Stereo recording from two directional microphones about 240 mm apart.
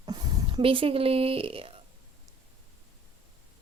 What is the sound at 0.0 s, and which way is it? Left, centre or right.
Speech, centre.